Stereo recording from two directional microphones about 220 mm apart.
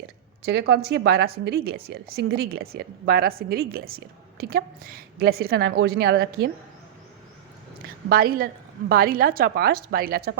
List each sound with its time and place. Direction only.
0.7 s a woman's voice: 50° right (ahead or behind)
8.1 s a woman's voice: 40° right (ahead or behind)